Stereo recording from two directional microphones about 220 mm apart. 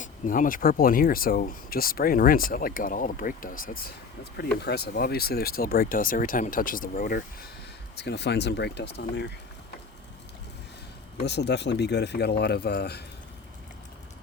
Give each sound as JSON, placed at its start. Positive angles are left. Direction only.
{"t": 0.0, "sound": "speech", "side_deg": 35}
{"t": 7.9, "sound": "speech", "side_deg": 50}
{"t": 11.2, "sound": "speech", "side_deg": 50}